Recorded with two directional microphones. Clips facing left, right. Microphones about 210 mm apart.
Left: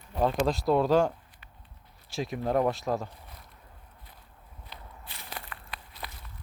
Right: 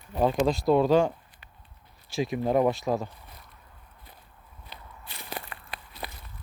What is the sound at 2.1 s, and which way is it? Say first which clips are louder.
Speech: right 3 dB; centre (ahead or behind).